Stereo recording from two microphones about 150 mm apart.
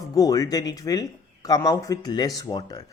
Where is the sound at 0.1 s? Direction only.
25° left (ahead or behind).